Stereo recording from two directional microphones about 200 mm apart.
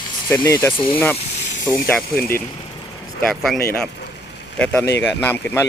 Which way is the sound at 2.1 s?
50° left (ahead or behind).